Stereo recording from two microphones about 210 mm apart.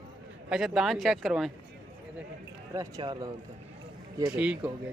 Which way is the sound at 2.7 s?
15° right (ahead or behind).